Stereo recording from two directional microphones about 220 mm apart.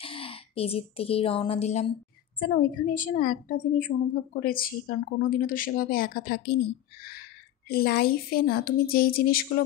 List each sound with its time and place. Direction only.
0.0 s a woman's voice: 25° left (ahead or behind); by 6.6 s 45° left (ahead or behind)
7.6 s a woman's voice: 45° left (ahead or behind)